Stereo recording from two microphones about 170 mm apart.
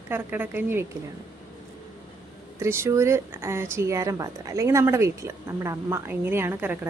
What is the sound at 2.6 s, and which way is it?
Speech, 15° right (ahead or behind).